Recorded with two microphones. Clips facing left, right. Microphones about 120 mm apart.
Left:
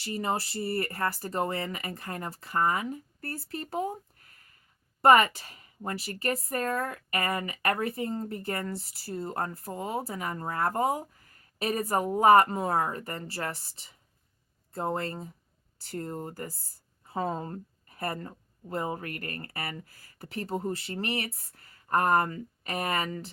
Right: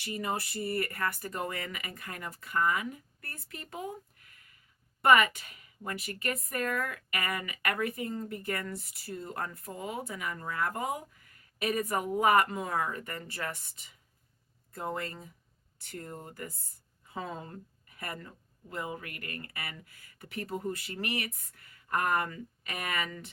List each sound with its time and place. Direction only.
0.0 s a woman's voice: 30° left (ahead or behind)